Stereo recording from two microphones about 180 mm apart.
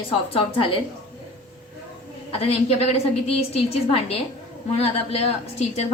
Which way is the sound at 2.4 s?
35° left (ahead or behind).